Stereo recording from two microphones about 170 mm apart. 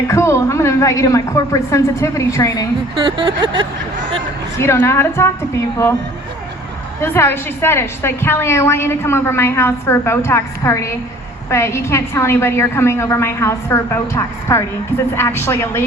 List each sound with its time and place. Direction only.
0.1 s a woman's voice: 15° left (ahead or behind)
2.9 s a sound: 30° right (ahead or behind)
4.5 s a woman's voice: 15° left (ahead or behind)
7.0 s a woman's voice: 15° left (ahead or behind)